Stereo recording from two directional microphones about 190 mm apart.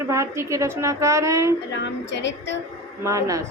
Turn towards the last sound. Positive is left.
turn(degrees=-15)  # may be behind; listen again after turning